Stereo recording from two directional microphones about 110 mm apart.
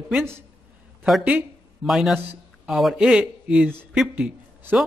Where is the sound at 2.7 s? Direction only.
Centre (ahead or behind).